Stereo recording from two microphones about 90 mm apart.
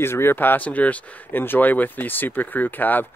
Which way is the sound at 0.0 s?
25° left (ahead or behind).